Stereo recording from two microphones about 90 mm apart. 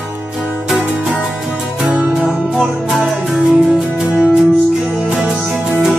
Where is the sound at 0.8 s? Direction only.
15° right (ahead or behind).